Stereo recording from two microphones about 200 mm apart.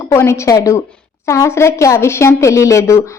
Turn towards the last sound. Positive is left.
turn(degrees=15)  # may be behind; listen again after turning